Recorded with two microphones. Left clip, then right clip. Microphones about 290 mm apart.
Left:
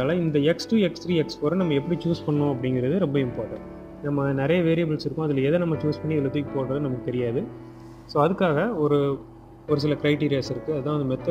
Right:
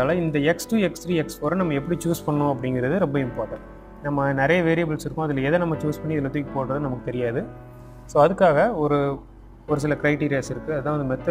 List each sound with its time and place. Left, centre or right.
0.0 s speech: right
10.2 s speech: right